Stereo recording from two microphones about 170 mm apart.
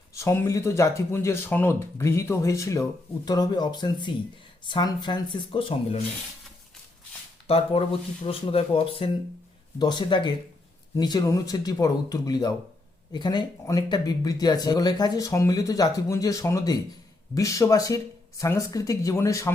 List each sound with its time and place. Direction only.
0.1 s speech: 15° left (ahead or behind); by 6.0 s 30° left (ahead or behind)
7.4 s speech: 35° left (ahead or behind); by 19.5 s 20° left (ahead or behind)